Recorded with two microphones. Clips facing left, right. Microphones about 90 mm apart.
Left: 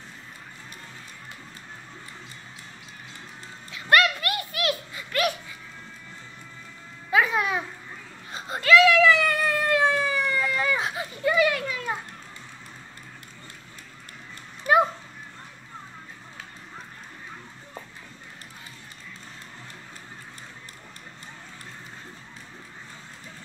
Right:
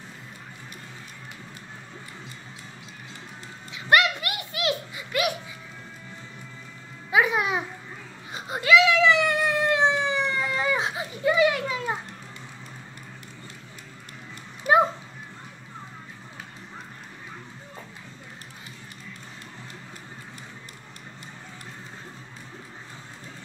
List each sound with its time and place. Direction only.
3.7 s a sound: 20° right (ahead or behind)
7.1 s babbling: 15° right (ahead or behind)
8.3 s whimper: 15° right (ahead or behind)